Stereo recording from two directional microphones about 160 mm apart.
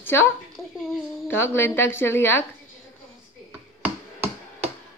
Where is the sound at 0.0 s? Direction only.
15° left (ahead or behind).